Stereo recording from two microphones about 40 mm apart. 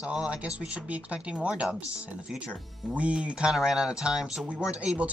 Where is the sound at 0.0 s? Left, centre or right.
Right.